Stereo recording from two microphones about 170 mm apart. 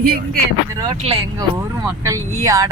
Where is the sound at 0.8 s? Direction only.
30° right (ahead or behind).